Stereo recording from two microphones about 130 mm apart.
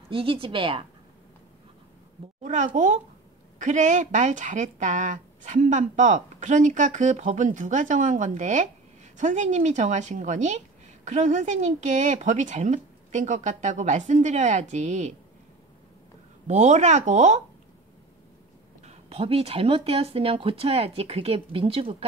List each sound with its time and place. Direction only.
0.1 s speech: 45° right (ahead or behind)
2.4 s speech: 70° right (ahead or behind)
16.4 s speech: 60° right (ahead or behind)
18.9 s speech: 50° right (ahead or behind)